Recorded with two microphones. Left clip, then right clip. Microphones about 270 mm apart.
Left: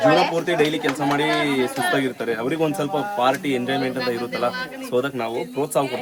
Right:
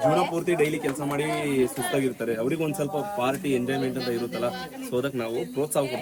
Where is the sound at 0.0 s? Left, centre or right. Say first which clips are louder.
Left 6 dB; left.